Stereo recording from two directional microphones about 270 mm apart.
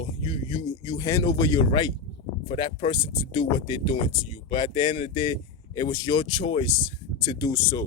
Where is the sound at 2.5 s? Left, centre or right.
Centre.